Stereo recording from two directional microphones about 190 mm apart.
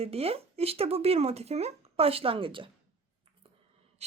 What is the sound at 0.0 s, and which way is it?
A woman's voice, 30° right (ahead or behind).